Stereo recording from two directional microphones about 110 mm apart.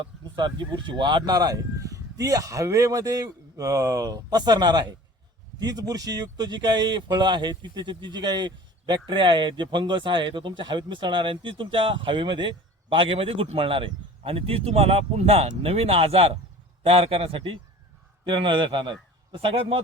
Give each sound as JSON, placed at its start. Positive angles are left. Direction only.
{"t": 0.0, "sound": "a man's voice", "side_deg": -45}